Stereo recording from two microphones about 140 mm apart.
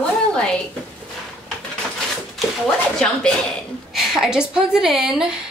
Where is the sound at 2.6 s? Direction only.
5° left (ahead or behind).